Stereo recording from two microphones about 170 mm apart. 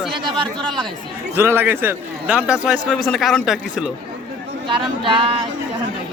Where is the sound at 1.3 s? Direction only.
10° right (ahead or behind).